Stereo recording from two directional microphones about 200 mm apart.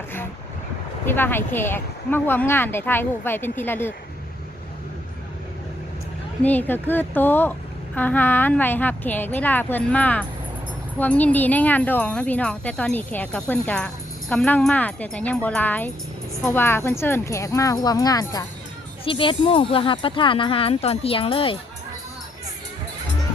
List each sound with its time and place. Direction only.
1.0 s speech: 10° left (ahead or behind)
6.4 s speech: 10° left (ahead or behind); by 21.6 s 25° left (ahead or behind)